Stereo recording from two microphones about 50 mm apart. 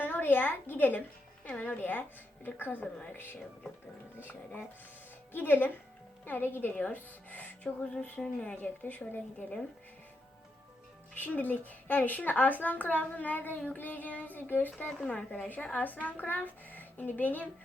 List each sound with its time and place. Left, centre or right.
0.0 s a woman's voice: left
8.5 s a woman's voice: left
11.1 s a woman's voice: left
15.0 s a woman's voice: left